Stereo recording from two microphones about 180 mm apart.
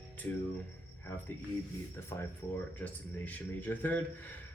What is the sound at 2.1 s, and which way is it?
Speech, 15° left (ahead or behind).